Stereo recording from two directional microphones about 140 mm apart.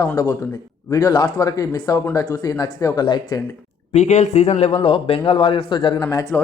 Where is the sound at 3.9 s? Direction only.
55° left (ahead or behind).